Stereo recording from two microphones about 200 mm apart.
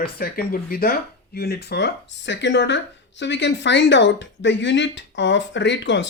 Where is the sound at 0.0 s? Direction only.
50° left (ahead or behind).